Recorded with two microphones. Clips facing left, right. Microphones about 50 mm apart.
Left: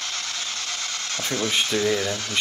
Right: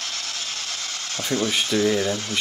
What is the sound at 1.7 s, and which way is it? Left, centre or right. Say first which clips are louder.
Speech: right 5 dB; right.